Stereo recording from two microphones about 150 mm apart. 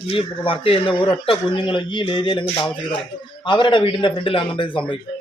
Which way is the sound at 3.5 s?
30° left (ahead or behind).